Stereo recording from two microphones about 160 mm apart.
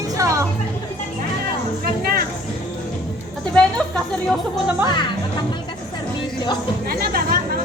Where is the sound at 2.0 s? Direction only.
65° right (ahead or behind).